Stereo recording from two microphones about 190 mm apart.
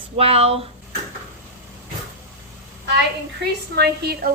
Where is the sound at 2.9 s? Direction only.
60° right (ahead or behind).